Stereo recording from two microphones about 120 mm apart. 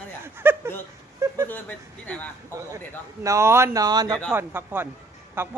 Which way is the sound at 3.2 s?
25° right (ahead or behind).